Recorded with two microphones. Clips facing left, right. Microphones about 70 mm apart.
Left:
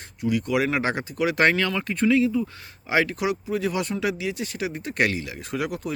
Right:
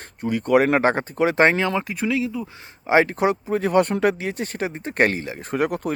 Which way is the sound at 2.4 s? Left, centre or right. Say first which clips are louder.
Left 3 dB; right.